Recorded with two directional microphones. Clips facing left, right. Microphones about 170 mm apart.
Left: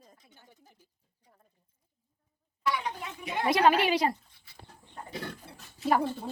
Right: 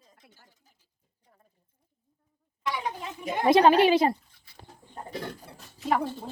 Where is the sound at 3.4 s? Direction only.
25° right (ahead or behind).